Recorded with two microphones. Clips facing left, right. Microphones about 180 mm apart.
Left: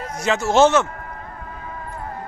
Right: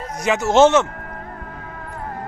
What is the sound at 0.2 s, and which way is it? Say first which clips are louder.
Speech: right 2 dB; 15° right (ahead or behind).